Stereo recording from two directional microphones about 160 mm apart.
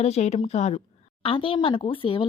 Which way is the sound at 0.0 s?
45° left (ahead or behind).